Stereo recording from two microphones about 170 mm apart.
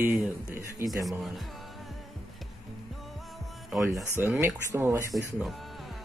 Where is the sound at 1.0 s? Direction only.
Centre (ahead or behind).